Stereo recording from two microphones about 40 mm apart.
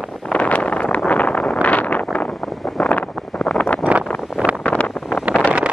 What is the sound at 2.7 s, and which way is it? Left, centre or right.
Wind noise, left.